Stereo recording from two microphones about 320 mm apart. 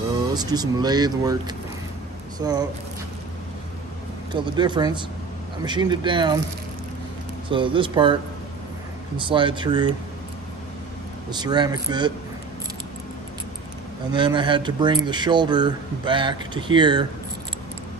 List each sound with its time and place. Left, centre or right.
0.3 s speech: centre
4.3 s speech: centre
7.4 s speech: centre
11.2 s speech: centre
14.1 s speech: centre